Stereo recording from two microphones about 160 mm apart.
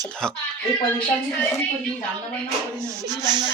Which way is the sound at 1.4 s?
15° left (ahead or behind).